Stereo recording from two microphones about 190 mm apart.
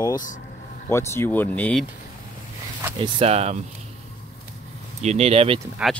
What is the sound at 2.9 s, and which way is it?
Speech, 30° right (ahead or behind).